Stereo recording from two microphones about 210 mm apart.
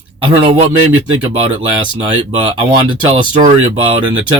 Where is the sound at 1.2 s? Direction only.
25° right (ahead or behind).